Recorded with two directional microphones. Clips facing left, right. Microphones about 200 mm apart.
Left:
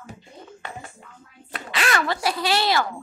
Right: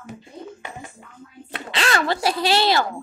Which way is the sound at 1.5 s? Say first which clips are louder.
Right 1 dB; 30° right (ahead or behind).